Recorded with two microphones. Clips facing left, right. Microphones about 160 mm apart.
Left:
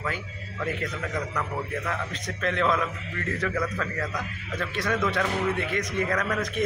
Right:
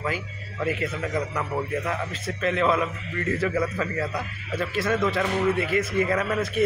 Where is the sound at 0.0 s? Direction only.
10° right (ahead or behind).